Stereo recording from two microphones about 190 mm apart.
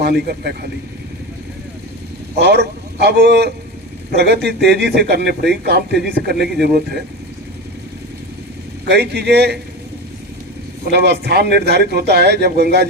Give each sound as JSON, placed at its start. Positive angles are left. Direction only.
{"t": 0.0, "sound": "speech", "side_deg": -60}
{"t": 2.4, "sound": "a man's voice", "side_deg": -60}
{"t": 8.9, "sound": "speech", "side_deg": -60}
{"t": 10.9, "sound": "speech", "side_deg": -60}